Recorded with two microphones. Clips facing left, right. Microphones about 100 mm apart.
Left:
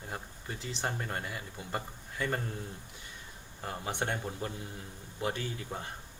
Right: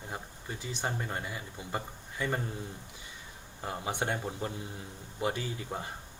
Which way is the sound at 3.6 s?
15° right (ahead or behind).